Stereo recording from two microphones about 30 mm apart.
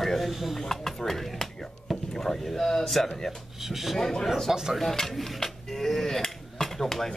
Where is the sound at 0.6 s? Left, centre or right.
Centre.